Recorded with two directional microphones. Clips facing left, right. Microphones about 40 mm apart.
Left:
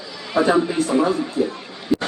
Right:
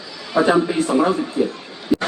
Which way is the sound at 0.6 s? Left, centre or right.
Right.